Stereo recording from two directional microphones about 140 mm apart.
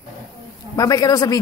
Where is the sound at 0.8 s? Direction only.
25° left (ahead or behind).